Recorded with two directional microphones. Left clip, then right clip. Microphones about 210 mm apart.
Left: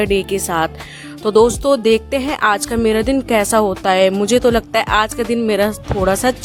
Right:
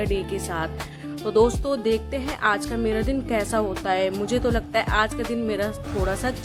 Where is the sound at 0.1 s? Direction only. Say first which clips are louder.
Left 10 dB; 55° left (ahead or behind).